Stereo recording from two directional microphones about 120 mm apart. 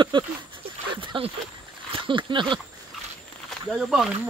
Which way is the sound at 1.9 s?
45° right (ahead or behind).